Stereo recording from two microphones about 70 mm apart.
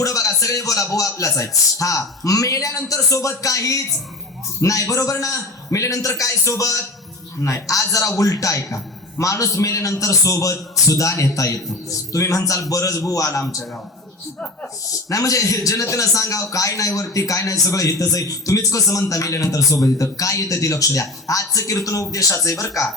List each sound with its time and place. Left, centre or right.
0.0 s a man's voice: left
14.8 s a man's voice: left